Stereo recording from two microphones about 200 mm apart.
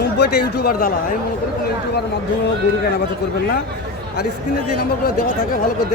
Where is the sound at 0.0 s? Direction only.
50° left (ahead or behind).